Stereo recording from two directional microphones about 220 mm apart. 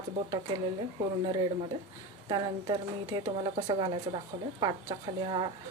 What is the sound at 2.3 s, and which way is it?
Speech, 20° right (ahead or behind).